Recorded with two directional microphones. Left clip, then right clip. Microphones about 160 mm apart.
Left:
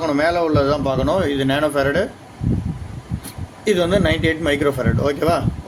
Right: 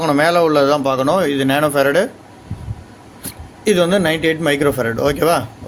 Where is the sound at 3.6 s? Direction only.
40° right (ahead or behind).